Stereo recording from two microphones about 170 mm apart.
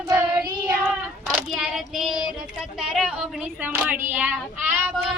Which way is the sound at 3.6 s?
10° right (ahead or behind).